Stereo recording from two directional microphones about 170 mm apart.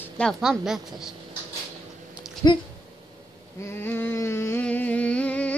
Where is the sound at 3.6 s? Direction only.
15° left (ahead or behind).